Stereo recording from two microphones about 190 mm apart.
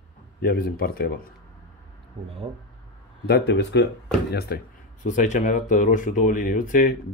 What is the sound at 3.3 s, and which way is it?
Speech, 65° left (ahead or behind).